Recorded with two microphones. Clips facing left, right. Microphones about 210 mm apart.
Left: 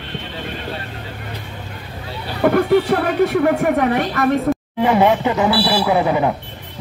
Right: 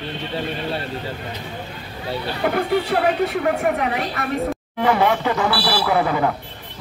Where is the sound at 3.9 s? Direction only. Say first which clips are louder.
Left 7 dB; 50° left (ahead or behind).